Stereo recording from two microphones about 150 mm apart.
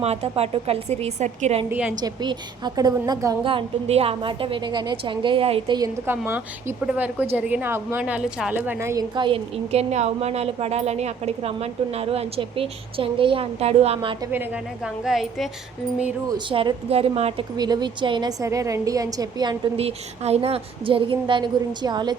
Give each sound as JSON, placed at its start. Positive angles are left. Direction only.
{"t": 0.0, "sound": "a woman's voice", "side_deg": -45}
{"t": 2.0, "sound": "a woman's voice", "side_deg": -30}
{"t": 3.4, "sound": "a woman's voice", "side_deg": -40}
{"t": 6.1, "sound": "a woman's voice", "side_deg": -15}
{"t": 9.1, "sound": "a woman's voice", "side_deg": -35}
{"t": 14.3, "sound": "speech", "side_deg": -5}
{"t": 16.3, "sound": "a woman's voice", "side_deg": -30}
{"t": 17.6, "sound": "a woman's voice", "side_deg": -25}
{"t": 19.7, "sound": "a woman's voice", "side_deg": -45}